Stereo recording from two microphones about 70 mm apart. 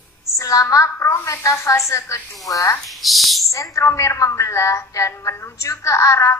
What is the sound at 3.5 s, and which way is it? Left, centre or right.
A woman's voice, left.